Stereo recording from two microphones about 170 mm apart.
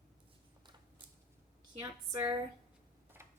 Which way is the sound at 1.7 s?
20° right (ahead or behind).